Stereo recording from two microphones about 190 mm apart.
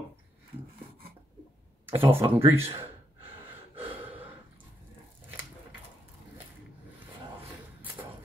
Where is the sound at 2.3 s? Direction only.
10° right (ahead or behind).